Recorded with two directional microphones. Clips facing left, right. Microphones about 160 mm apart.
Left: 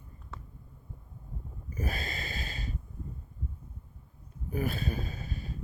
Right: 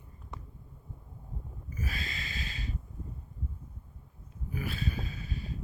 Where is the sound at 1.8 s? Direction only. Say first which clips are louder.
Left 4 dB; 50° left (ahead or behind).